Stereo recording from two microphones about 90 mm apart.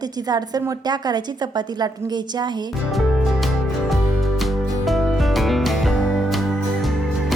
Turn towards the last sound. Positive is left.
turn(degrees=0)  # may be behind; listen again after turning